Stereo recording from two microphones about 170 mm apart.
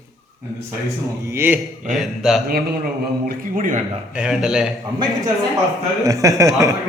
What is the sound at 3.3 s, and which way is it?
Speech, 50° right (ahead or behind).